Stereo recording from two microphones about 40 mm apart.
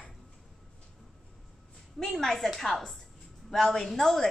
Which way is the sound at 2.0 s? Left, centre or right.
Centre.